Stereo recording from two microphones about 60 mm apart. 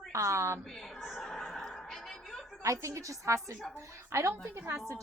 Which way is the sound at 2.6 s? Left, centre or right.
Right.